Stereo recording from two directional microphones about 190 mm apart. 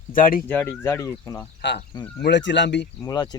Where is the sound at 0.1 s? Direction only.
45° left (ahead or behind).